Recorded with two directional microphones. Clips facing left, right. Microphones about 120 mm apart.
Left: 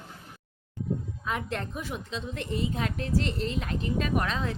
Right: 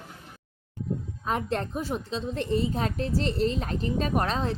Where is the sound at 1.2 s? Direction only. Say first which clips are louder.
Right 5 dB; 35° right (ahead or behind).